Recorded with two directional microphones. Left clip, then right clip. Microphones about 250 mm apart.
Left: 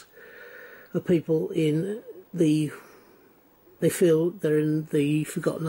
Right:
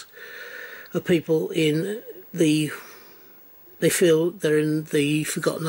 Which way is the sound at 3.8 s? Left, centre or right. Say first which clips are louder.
Right 3 dB; centre.